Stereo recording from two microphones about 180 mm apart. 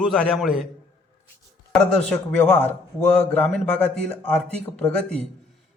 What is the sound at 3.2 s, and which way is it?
Speech, 10° left (ahead or behind).